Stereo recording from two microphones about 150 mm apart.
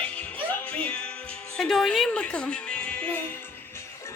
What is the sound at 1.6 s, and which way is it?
Music, centre (ahead or behind).